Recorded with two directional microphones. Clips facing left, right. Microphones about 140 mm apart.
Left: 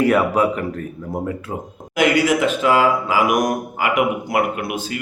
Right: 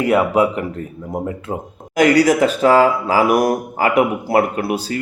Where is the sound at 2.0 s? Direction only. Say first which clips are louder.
Right 4 dB; 40° right (ahead or behind).